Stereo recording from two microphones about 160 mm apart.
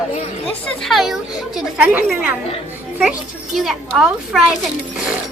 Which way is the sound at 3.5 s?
Centre (ahead or behind).